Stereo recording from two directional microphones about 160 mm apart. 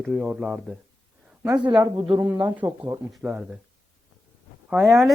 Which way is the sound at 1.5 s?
30° right (ahead or behind).